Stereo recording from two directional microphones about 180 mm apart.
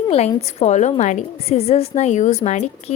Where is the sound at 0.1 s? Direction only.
35° left (ahead or behind).